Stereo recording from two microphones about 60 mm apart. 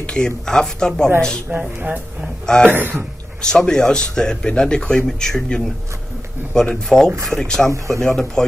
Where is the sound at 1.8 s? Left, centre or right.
Right.